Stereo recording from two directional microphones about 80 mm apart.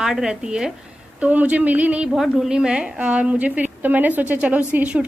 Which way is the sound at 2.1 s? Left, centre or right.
Centre.